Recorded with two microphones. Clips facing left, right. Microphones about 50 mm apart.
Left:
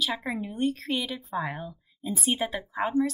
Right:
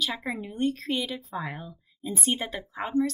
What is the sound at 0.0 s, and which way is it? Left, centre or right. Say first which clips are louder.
Speech: left 1 dB; centre.